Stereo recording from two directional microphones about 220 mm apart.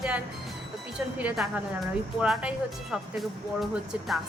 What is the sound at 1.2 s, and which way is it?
Speech, 5° right (ahead or behind).